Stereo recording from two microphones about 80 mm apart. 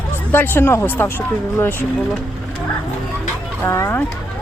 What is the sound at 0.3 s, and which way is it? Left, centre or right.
Speech, left.